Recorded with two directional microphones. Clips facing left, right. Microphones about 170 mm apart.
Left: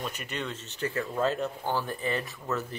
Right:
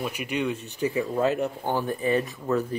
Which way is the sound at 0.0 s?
10° right (ahead or behind).